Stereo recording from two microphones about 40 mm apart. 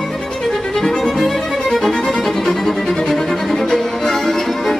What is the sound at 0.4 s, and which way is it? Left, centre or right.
Music, centre.